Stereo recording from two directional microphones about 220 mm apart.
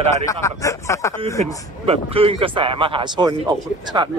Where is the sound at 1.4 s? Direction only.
25° right (ahead or behind).